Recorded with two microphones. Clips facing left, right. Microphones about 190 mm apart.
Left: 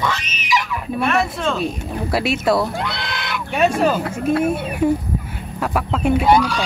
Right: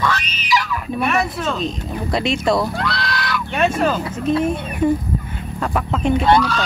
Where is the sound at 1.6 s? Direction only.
10° left (ahead or behind).